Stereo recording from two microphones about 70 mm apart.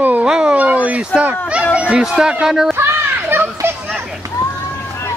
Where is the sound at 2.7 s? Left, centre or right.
Right.